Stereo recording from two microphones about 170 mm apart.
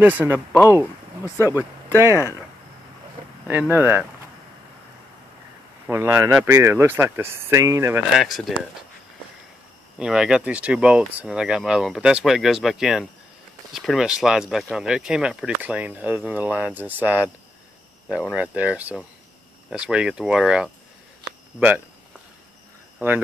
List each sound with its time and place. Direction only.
0.0 s speech: 10° right (ahead or behind)
1.2 s speech: 15° left (ahead or behind)
3.4 s speech: 10° right (ahead or behind)
5.9 s speech: 15° right (ahead or behind)
8.2 s speech: centre (ahead or behind)
9.9 s speech: 5° right (ahead or behind)
18.3 s speech: 5° right (ahead or behind)
22.9 s speech: 10° right (ahead or behind)